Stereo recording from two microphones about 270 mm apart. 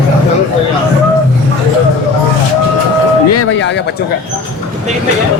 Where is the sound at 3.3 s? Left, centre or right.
Left.